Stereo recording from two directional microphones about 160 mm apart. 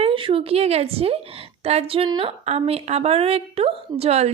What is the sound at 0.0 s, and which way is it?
A woman's voice, 35° right (ahead or behind).